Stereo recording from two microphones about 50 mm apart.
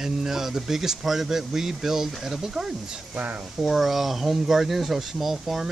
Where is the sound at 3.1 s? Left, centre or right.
Right.